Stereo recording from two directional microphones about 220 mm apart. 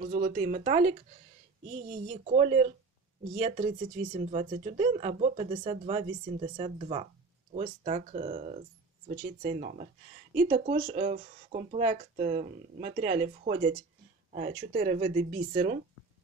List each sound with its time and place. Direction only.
0.0 s speech: 35° right (ahead or behind)
2.2 s speech: 30° right (ahead or behind)